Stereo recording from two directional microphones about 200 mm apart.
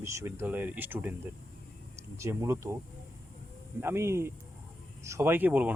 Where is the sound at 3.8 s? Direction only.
10° right (ahead or behind).